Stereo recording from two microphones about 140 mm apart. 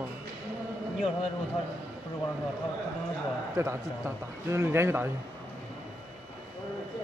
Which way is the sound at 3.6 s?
20° right (ahead or behind).